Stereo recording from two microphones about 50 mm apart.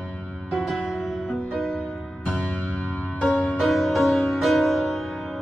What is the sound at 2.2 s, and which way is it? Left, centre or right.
Music, left.